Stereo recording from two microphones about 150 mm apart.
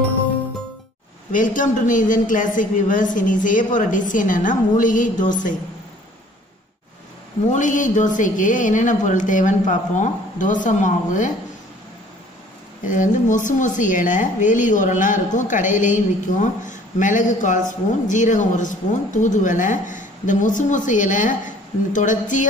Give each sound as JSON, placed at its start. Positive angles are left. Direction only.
{"t": 1.3, "sound": "speech", "side_deg": 60}
{"t": 7.5, "sound": "speech", "side_deg": 60}
{"t": 12.8, "sound": "speech", "side_deg": 60}